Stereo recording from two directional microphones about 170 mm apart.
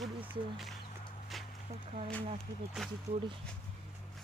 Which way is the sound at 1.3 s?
Centre (ahead or behind).